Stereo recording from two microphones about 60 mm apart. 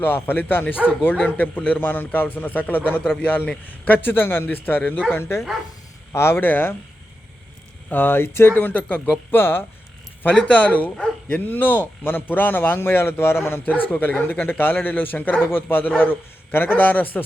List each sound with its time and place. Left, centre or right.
0.0 s a man's voice: left
5.1 s speech: left
6.3 s a man's voice: left
7.9 s a man's voice: left
10.2 s a man's voice: left
13.7 s a man's voice: left